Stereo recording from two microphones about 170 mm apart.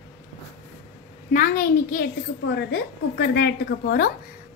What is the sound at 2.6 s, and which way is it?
A woman's voice, 70° left (ahead or behind).